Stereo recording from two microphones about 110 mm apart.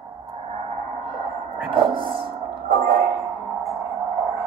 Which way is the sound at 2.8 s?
70° right (ahead or behind).